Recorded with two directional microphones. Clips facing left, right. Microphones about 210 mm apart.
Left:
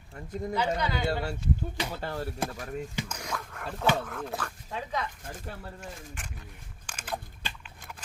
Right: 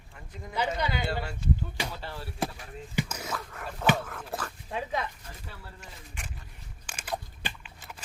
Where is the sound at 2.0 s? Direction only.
45° left (ahead or behind).